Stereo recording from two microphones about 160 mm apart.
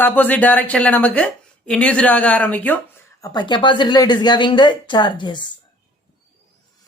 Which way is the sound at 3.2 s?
25° left (ahead or behind).